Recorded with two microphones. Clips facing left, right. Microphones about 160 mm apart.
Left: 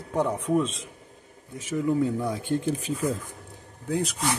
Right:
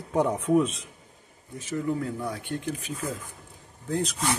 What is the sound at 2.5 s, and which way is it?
Speech, 30° left (ahead or behind).